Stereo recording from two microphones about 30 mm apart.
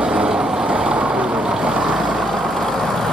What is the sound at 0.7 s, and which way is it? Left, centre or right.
Vehicle, right.